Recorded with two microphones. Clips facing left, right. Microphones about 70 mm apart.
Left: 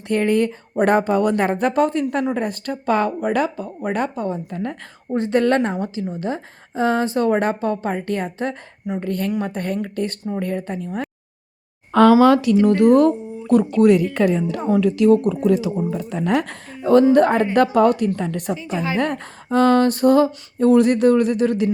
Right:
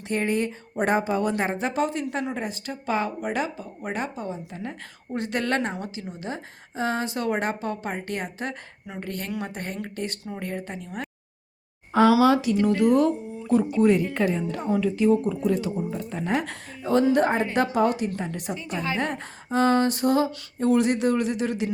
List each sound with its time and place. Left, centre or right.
0.3 s speech: left
5.1 s speech: left
11.9 s speech: left
13.7 s speech: left
16.5 s a woman's voice: left
18.5 s a woman's voice: centre
18.9 s speech: left